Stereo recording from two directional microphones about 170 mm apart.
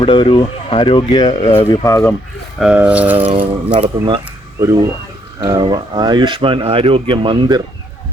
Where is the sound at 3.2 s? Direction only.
30° right (ahead or behind).